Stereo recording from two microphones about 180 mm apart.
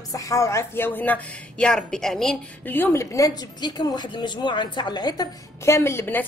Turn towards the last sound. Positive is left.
turn(degrees=10)  # may be behind; listen again after turning